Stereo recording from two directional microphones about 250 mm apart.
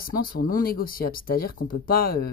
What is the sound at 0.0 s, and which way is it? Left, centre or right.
Speech, left.